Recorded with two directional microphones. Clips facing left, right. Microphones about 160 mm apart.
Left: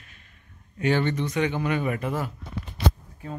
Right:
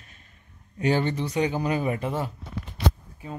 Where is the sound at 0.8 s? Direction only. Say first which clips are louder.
Even; 35° right (ahead or behind).